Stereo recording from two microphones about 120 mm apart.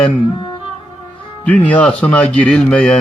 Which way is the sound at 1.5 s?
10° left (ahead or behind).